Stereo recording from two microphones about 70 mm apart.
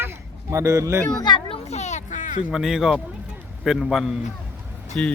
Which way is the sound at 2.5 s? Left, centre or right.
Centre.